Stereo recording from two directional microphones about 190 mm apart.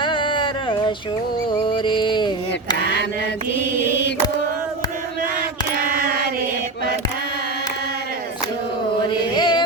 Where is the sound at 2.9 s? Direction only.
65° left (ahead or behind).